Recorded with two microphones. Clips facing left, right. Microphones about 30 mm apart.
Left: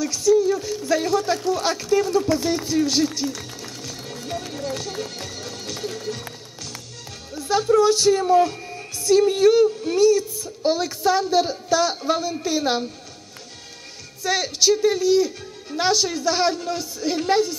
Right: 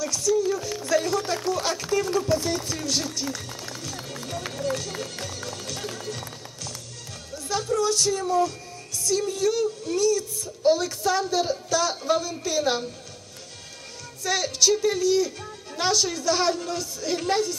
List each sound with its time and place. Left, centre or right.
0.0 s a woman's voice: centre
1.8 s speech: centre
2.1 s a woman's voice: centre
3.3 s run: centre
4.5 s a woman's voice: centre
14.2 s a woman's voice: centre